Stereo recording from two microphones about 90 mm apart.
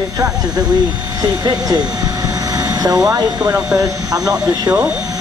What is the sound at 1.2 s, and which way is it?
Speech, 45° right (ahead or behind).